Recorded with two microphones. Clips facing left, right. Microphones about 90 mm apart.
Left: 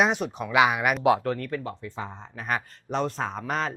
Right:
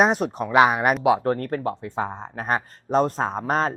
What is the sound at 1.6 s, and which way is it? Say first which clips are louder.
Speech: right 8 dB; 60° right (ahead or behind).